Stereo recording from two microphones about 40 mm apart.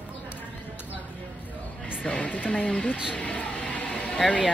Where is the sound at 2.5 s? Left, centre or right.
Left.